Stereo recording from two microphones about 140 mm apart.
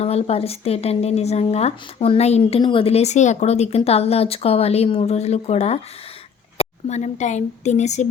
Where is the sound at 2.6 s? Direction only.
40° left (ahead or behind).